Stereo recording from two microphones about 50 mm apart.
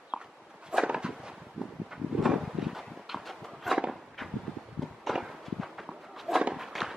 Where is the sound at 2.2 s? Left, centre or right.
Centre.